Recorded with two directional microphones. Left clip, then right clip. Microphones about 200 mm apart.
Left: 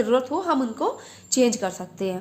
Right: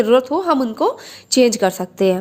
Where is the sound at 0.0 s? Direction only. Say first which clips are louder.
Right 7 dB; 40° right (ahead or behind).